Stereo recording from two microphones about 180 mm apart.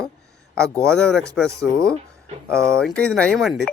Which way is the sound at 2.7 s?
5° left (ahead or behind).